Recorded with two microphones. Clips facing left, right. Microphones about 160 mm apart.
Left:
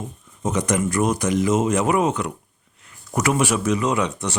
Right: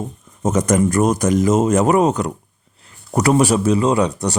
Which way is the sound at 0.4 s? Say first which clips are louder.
Right 6 dB; 45° right (ahead or behind).